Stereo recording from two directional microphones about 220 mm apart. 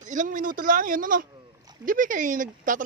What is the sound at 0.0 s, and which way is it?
Speech, 35° right (ahead or behind).